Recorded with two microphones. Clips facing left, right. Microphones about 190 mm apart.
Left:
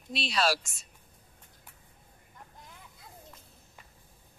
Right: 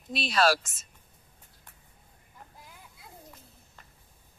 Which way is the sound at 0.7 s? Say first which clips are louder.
Even; centre (ahead or behind).